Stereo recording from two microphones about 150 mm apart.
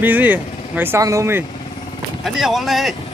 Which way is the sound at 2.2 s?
Centre (ahead or behind).